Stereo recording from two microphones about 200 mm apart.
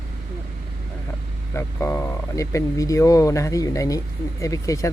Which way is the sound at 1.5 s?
15° left (ahead or behind).